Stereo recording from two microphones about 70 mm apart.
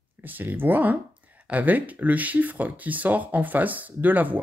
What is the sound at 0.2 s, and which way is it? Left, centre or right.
Speech, right.